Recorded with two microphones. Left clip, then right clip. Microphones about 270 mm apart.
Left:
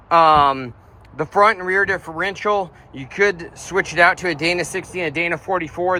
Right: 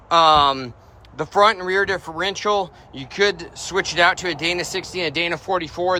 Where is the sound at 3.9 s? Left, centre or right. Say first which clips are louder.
Left 3 dB; centre.